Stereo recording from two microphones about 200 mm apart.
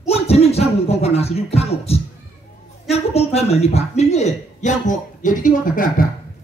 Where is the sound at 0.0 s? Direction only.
30° left (ahead or behind).